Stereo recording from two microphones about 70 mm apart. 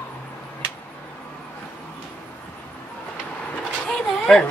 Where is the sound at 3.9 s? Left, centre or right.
Centre.